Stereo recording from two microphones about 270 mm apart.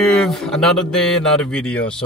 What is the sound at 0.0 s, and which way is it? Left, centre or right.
Speech, centre.